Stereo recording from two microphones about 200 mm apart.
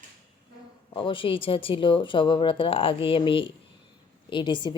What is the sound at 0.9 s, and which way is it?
A woman's voice, 25° left (ahead or behind).